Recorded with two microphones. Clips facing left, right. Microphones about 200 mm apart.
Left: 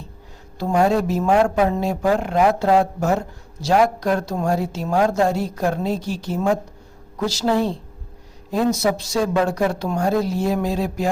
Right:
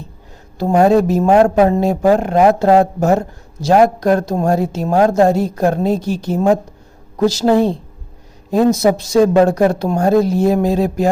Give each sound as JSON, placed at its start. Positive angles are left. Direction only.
{"t": 0.6, "sound": "a woman's voice", "side_deg": -40}
{"t": 7.3, "sound": "a woman's voice", "side_deg": -20}
{"t": 8.8, "sound": "a woman's voice", "side_deg": -50}